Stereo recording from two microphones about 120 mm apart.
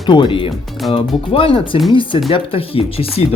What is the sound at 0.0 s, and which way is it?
Speech, 40° left (ahead or behind).